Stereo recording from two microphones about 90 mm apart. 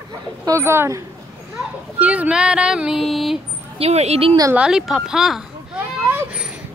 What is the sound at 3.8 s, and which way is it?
Speech, 90° right.